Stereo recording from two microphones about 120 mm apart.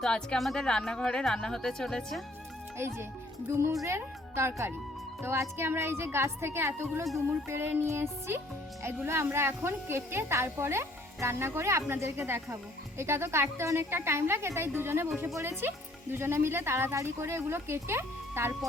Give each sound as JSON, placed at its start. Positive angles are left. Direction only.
{"t": 0.0, "sound": "speech", "side_deg": 5}
{"t": 2.7, "sound": "a woman's voice", "side_deg": -20}